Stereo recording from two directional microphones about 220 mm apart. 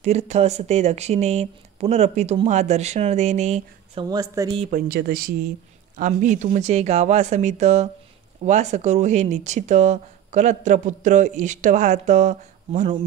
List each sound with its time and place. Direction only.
0.0 s speech: 30° right (ahead or behind)
4.1 s speech: 15° right (ahead or behind)
4.6 s speech: 40° right (ahead or behind)